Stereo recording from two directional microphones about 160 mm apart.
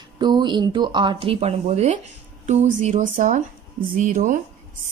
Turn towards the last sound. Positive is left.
turn(degrees=-55)  # may be behind; listen again after turning